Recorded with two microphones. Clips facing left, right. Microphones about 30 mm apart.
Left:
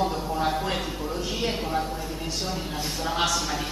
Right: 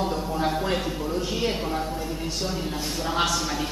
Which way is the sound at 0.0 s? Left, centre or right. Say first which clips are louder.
Even; centre.